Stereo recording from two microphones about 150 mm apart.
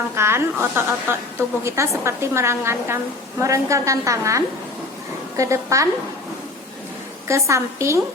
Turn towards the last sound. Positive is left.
turn(degrees=-20)  # may be behind; listen again after turning